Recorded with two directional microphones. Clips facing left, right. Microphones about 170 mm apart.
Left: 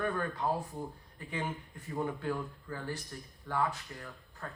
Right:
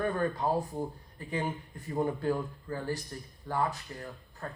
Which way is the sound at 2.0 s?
35° right (ahead or behind).